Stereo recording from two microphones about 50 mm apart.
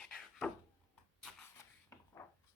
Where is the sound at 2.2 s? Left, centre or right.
Left.